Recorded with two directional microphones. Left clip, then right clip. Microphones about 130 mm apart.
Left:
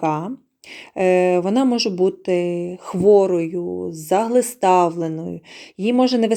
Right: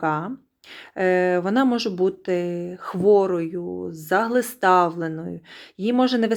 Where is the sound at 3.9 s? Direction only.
20° left (ahead or behind).